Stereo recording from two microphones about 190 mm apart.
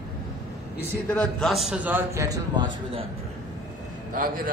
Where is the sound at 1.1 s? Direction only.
5° left (ahead or behind); by 3.0 s 25° right (ahead or behind).